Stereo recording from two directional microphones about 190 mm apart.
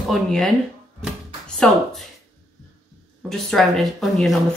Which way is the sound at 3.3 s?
Centre (ahead or behind).